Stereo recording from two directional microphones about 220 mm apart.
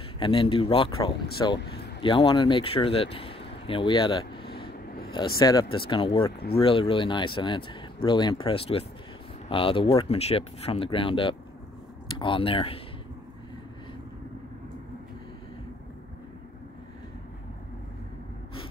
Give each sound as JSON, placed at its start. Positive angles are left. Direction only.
{"t": 0.2, "sound": "speech", "side_deg": 25}
{"t": 4.5, "sound": "a sound", "side_deg": 45}
{"t": 5.4, "sound": "speech", "side_deg": 20}